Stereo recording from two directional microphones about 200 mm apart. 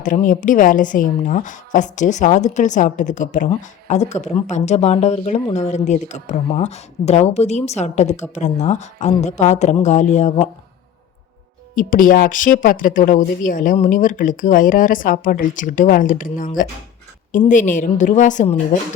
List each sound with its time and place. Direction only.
0.0 s speech: 40° left (ahead or behind)
11.7 s speech: 45° left (ahead or behind)